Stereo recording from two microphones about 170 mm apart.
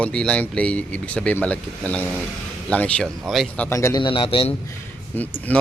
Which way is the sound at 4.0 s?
30° left (ahead or behind).